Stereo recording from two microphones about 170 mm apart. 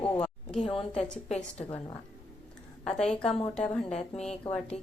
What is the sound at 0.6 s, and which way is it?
Speech, 30° left (ahead or behind).